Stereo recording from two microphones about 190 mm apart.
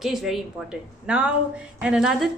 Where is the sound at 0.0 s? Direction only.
Centre (ahead or behind).